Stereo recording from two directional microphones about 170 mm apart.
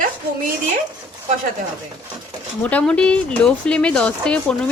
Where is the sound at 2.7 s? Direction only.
5° left (ahead or behind).